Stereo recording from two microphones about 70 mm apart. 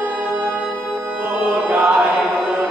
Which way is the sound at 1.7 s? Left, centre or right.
Centre.